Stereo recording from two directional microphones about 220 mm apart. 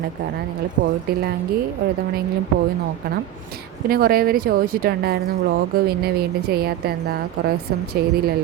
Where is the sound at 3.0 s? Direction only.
45° right (ahead or behind).